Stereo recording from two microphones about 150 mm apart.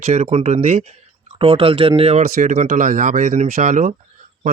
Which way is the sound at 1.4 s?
40° right (ahead or behind).